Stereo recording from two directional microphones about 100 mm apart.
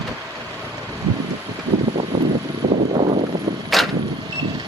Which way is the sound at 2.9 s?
75° right (ahead or behind).